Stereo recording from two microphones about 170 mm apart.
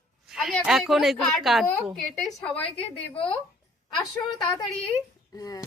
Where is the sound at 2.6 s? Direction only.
35° left (ahead or behind).